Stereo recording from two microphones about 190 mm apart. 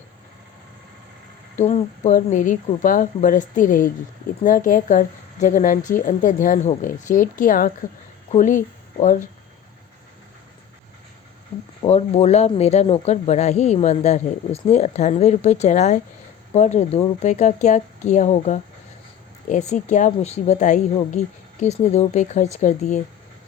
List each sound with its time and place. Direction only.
1.5 s a woman's voice: 40° left (ahead or behind)
11.8 s speech: 35° left (ahead or behind)